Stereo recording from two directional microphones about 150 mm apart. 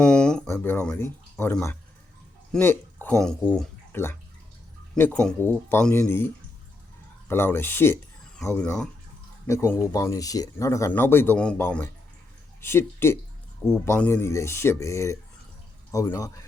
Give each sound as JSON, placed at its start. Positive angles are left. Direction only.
{"t": 0.0, "sound": "a sound", "side_deg": 5}
{"t": 0.4, "sound": "speech", "side_deg": 15}
{"t": 9.5, "sound": "speech", "side_deg": 20}